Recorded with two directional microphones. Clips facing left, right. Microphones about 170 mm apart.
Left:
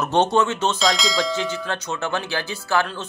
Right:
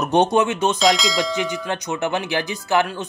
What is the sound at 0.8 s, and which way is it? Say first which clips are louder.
Speech: right 3 dB; centre (ahead or behind).